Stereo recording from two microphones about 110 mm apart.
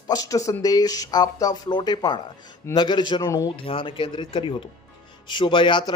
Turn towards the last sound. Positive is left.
turn(degrees=45)  # may be behind; listen again after turning